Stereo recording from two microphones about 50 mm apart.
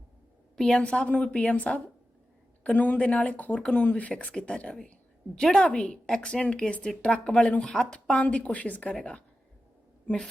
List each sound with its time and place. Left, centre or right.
0.5 s a woman's voice: centre; by 3.5 s left
3.5 s speech: centre
3.8 s a woman's voice: left
9.0 s speech: centre